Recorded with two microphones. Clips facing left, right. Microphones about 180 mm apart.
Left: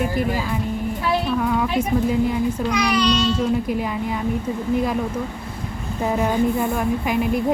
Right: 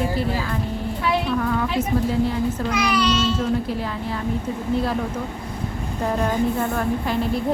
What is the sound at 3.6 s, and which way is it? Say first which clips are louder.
Speech: left 3 dB; 15° left (ahead or behind).